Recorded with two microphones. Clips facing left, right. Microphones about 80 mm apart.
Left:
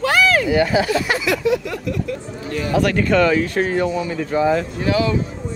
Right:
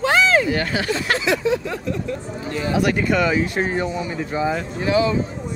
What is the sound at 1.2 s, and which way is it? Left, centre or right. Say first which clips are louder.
Speech: left 1 dB; right.